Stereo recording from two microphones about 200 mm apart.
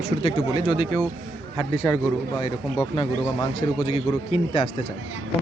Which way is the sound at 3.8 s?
30° left (ahead or behind).